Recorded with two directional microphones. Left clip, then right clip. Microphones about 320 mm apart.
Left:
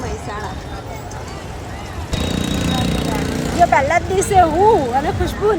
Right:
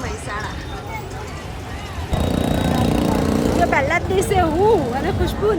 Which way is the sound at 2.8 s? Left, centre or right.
Right.